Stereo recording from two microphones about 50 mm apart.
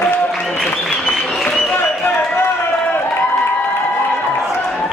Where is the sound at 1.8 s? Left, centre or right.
Left.